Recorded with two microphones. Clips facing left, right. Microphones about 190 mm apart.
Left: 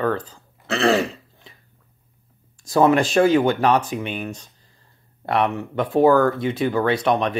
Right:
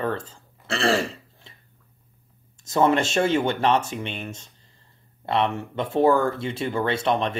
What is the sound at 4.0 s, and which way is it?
Speech, 5° left (ahead or behind).